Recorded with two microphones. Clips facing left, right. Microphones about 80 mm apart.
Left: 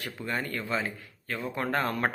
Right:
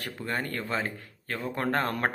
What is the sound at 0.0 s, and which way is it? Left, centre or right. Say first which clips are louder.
Speech: right 1 dB; right.